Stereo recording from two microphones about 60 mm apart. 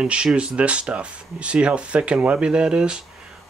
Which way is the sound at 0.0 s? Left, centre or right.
Centre.